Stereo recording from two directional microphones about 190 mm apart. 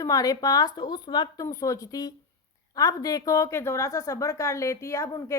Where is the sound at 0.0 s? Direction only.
20° left (ahead or behind).